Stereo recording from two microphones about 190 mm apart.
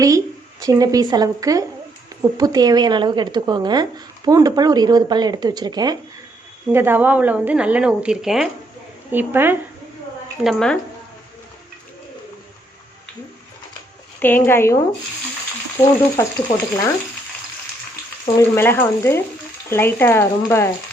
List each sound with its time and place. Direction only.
0.6 s speech: 20° right (ahead or behind)
6.7 s a woman's voice: 10° right (ahead or behind)
10.4 s a woman's voice: centre (ahead or behind)
14.2 s frying: 10° left (ahead or behind)
18.3 s frying: 10° left (ahead or behind)